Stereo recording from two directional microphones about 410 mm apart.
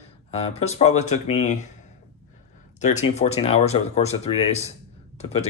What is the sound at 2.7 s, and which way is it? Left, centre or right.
Speech, centre.